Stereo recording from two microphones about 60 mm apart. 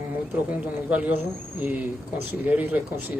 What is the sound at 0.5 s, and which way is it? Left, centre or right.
Speech, right.